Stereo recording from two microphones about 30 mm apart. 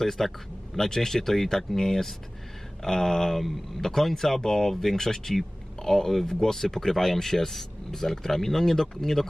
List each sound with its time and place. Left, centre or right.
0.0 s speech: centre